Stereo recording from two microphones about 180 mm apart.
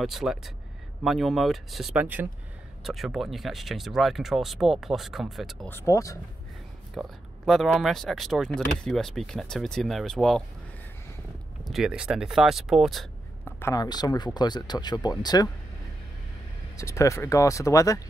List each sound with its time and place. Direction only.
0.0 s speech: centre (ahead or behind)
5.7 s speech: 15° left (ahead or behind)
7.0 s speech: centre (ahead or behind)
11.7 s speech: 5° right (ahead or behind)
13.5 s speech: 15° left (ahead or behind)
16.7 s speech: 15° left (ahead or behind)